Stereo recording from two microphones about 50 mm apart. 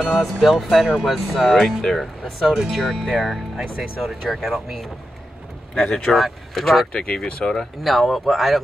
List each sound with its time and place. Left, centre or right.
0.1 s speech: centre
6.9 s speech: left
7.8 s speech: centre